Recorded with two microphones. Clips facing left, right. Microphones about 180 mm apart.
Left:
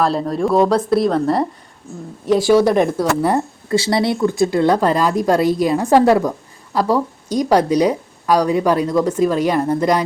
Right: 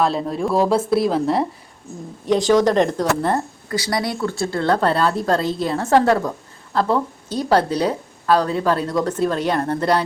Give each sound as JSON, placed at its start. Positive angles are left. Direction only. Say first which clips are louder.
{"t": 0.0, "sound": "speech", "louder": "left 3 dB", "side_deg": 0}
{"t": 3.7, "sound": "speech", "louder": "left 6 dB", "side_deg": 25}